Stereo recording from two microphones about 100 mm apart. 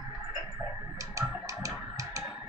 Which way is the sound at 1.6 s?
30° right (ahead or behind).